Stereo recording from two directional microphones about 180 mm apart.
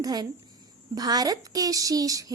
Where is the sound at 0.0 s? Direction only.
20° right (ahead or behind).